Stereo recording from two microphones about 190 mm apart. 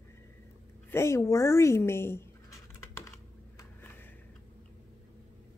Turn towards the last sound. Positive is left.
turn(degrees=10)  # may be behind; listen again after turning